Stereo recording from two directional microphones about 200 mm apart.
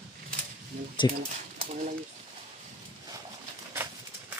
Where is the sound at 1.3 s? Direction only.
35° right (ahead or behind).